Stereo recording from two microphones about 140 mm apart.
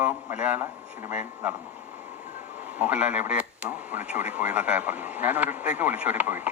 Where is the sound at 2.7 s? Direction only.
10° right (ahead or behind).